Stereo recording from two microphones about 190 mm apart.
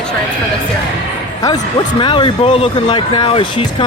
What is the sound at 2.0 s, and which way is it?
Speech, 25° left (ahead or behind).